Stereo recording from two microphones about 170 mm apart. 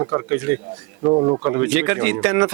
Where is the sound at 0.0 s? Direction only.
20° right (ahead or behind).